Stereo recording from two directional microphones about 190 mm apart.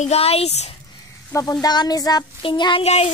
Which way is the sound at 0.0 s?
35° left (ahead or behind).